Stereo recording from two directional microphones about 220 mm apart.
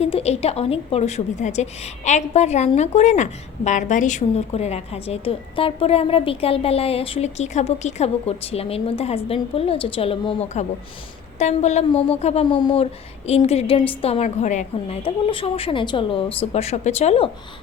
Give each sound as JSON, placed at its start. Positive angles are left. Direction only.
{"t": 0.0, "sound": "a woman's voice", "side_deg": 30}